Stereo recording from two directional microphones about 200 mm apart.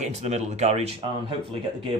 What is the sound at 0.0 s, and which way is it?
Speech, 35° right (ahead or behind).